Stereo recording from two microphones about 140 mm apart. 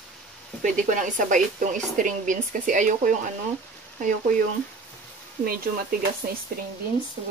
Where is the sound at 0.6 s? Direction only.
65° right (ahead or behind).